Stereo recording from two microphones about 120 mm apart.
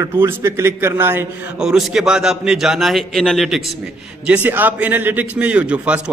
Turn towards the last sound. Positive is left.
turn(degrees=-10)  # may be behind; listen again after turning